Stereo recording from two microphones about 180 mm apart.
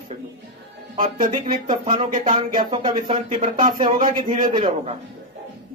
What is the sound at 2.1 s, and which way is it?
Speech, 45° right (ahead or behind).